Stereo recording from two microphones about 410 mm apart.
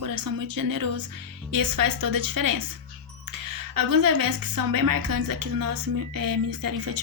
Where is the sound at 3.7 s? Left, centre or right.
Right.